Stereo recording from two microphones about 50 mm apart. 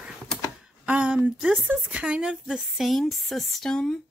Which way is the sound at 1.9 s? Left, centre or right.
Right.